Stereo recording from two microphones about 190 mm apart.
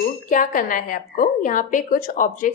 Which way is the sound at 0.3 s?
45° left (ahead or behind).